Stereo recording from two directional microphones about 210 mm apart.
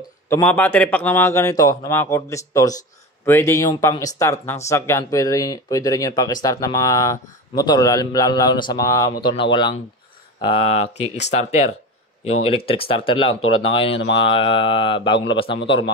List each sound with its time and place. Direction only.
0.3 s a man's voice: 10° left (ahead or behind)